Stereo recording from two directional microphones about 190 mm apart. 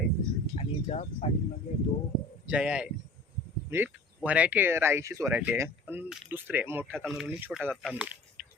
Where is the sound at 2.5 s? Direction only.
5° right (ahead or behind).